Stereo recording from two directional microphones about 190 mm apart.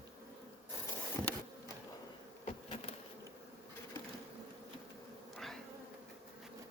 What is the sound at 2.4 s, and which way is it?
Bee, 30° left (ahead or behind).